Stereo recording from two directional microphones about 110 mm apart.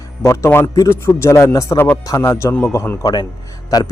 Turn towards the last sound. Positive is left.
turn(degrees=35)  # may be behind; listen again after turning